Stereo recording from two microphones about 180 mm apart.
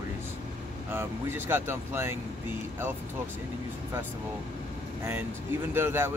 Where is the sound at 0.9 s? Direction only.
10° right (ahead or behind).